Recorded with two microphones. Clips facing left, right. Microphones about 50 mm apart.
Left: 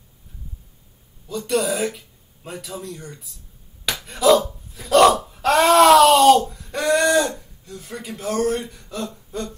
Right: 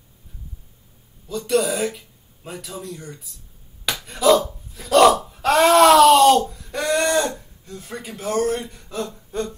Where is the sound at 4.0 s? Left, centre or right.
Centre.